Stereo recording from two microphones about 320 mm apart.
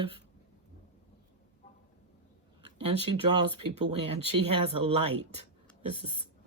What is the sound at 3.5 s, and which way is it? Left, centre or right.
Speech, right.